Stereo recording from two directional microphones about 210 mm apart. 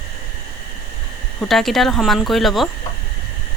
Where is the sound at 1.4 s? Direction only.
Centre (ahead or behind).